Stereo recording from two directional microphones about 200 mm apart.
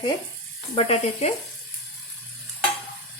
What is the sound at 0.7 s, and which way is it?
Speech, 30° left (ahead or behind).